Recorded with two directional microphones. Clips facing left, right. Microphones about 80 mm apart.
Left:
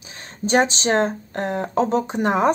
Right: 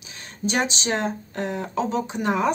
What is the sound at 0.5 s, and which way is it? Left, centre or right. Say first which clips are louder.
Speech: left 6 dB; left.